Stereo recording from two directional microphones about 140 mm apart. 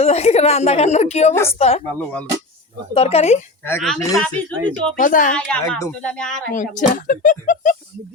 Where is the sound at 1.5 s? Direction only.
45° left (ahead or behind).